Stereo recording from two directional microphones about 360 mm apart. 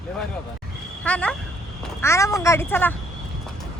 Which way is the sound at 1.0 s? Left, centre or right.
Centre.